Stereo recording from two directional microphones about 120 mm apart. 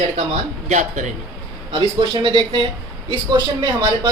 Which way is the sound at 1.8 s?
40° right (ahead or behind).